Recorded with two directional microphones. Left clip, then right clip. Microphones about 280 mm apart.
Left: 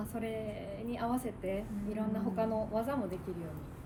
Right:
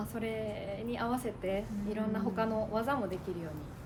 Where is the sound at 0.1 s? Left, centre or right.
Centre.